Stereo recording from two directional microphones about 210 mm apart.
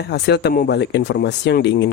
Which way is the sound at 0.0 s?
50° left (ahead or behind).